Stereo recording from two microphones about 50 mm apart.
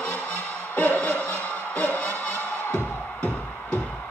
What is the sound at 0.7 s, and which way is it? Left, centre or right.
Music, left.